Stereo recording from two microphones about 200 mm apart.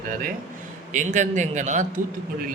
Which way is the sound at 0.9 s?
40° right (ahead or behind).